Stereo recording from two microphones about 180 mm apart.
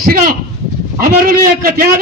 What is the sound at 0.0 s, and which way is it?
A man's voice, 55° right (ahead or behind).